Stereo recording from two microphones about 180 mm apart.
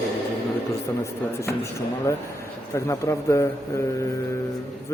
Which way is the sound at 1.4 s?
15° left (ahead or behind).